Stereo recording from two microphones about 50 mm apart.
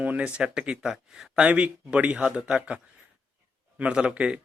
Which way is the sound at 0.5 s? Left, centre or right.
Centre.